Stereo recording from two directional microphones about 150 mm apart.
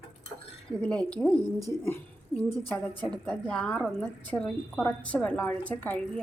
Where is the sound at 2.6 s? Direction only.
10° left (ahead or behind).